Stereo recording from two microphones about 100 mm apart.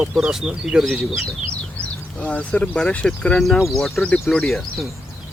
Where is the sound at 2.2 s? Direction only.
15° left (ahead or behind).